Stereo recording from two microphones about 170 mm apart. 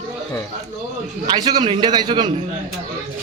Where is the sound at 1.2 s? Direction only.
25° right (ahead or behind).